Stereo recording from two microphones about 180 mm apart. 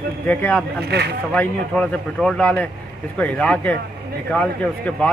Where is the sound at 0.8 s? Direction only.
65° right (ahead or behind).